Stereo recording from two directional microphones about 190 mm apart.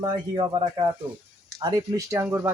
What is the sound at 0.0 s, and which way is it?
Speech, 20° right (ahead or behind).